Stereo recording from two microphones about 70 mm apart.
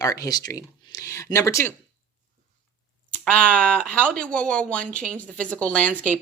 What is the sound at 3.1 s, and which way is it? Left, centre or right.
Speech, centre.